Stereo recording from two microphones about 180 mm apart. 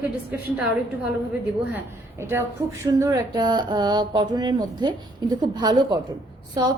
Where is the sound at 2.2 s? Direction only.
15° right (ahead or behind).